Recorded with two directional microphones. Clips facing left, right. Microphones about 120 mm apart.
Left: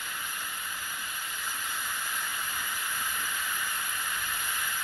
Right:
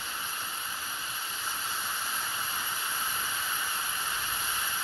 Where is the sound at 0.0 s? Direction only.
25° right (ahead or behind).